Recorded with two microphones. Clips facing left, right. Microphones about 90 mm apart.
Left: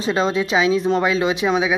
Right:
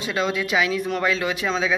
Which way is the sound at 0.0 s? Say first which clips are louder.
Left 5 dB; 30° left (ahead or behind).